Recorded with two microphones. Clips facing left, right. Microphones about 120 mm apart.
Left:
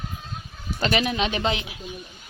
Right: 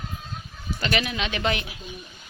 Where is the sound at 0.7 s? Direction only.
35° left (ahead or behind).